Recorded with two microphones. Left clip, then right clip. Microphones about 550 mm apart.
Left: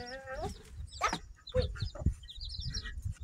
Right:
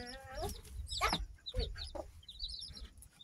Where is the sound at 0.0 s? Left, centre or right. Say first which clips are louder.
Left 4 dB; right.